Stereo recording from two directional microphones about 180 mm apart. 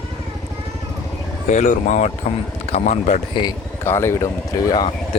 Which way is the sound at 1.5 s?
45° left (ahead or behind).